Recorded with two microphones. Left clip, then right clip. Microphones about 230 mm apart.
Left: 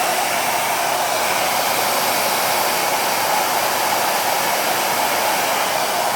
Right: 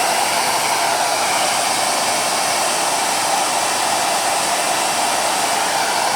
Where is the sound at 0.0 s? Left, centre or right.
Centre.